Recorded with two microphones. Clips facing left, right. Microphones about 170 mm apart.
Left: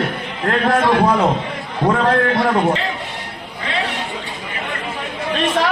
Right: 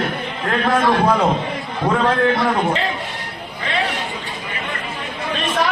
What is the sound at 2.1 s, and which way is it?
Speech, 20° left (ahead or behind).